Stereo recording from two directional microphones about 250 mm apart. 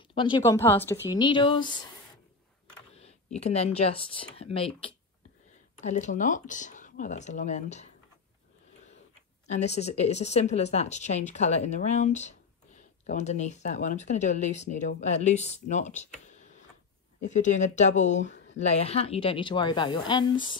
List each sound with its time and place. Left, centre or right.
0.1 s speech: centre
3.3 s speech: left
9.5 s speech: left
17.2 s speech: left